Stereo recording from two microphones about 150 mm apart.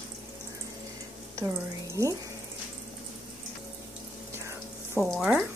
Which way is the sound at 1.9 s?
20° right (ahead or behind).